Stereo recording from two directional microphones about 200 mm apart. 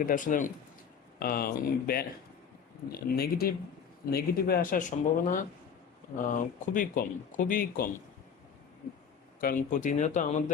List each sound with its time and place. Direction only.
0.0 s speech: 40° left (ahead or behind)
9.4 s speech: 45° left (ahead or behind)